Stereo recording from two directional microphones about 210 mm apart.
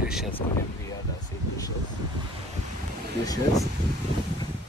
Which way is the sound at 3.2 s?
15° left (ahead or behind).